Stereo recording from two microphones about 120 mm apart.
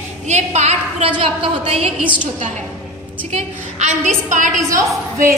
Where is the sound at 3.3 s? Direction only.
75° right (ahead or behind).